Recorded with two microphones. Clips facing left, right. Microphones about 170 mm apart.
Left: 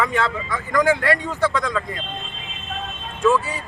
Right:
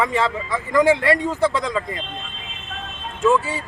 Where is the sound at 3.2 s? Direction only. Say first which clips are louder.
Right 1 dB; 25° right (ahead or behind).